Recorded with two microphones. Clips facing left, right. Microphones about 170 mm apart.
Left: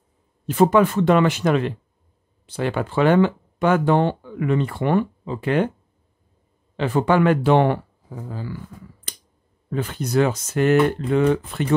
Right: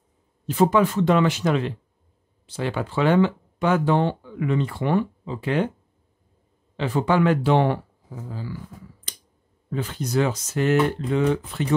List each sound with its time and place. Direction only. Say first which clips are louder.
0.5 s speech: left 3 dB; 55° left (ahead or behind)
6.8 s speech: left 3 dB; 55° left (ahead or behind)
9.1 s a sound: left 4 dB; 60° left (ahead or behind)
9.7 s speech: left 2 dB; 55° left (ahead or behind)